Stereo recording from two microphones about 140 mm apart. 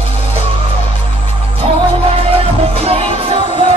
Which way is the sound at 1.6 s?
40° right (ahead or behind).